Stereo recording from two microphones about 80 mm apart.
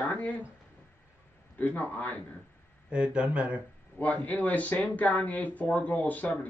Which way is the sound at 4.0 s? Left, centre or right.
Left.